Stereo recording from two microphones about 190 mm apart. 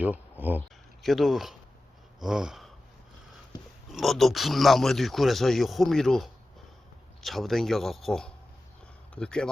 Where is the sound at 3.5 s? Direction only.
20° left (ahead or behind).